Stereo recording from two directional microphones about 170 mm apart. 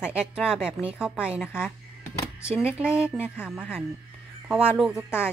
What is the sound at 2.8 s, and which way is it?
Speech, 5° right (ahead or behind).